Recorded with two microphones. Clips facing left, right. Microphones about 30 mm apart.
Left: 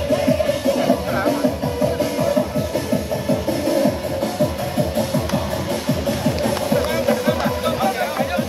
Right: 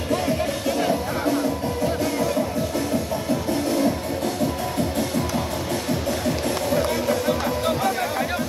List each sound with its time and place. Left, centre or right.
6.4 s music: centre